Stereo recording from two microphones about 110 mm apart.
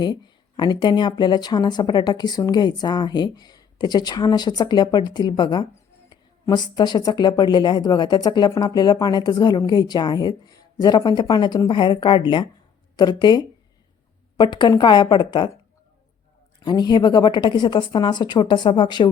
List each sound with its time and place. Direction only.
0.0 s a woman's voice: 45° left (ahead or behind)
16.6 s a woman's voice: 40° left (ahead or behind)